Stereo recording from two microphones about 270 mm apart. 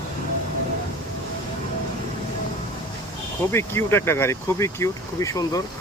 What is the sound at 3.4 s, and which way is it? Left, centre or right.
Speech, centre.